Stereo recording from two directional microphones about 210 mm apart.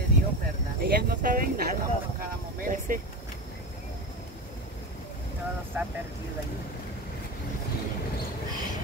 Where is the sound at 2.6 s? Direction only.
40° right (ahead or behind).